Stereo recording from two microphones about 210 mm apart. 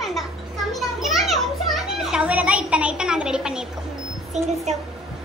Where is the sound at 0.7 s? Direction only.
Centre (ahead or behind).